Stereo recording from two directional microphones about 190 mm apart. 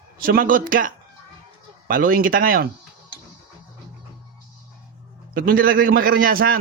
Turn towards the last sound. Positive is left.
turn(degrees=-50)  # may be behind; listen again after turning